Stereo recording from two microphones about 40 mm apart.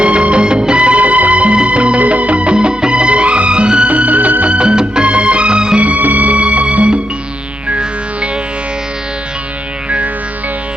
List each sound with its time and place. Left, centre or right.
0.0 s music: right
4.4 s music: right
5.8 s music: right